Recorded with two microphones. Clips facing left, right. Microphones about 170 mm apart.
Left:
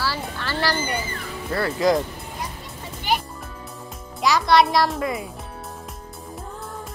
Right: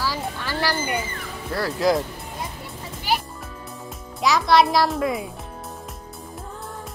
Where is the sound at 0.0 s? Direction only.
15° right (ahead or behind).